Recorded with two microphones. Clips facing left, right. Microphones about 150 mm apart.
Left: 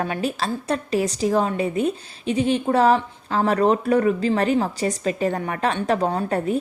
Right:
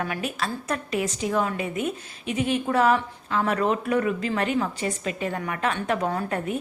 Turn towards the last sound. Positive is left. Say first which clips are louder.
# left 5 dB
turn(degrees=30)  # may be behind; listen again after turning